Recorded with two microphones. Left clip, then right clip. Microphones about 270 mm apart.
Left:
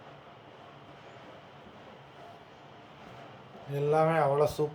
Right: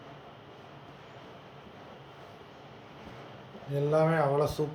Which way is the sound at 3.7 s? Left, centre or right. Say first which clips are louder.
Even; centre.